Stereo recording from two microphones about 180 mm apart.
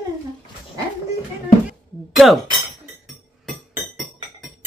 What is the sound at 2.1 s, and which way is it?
Speech, centre (ahead or behind).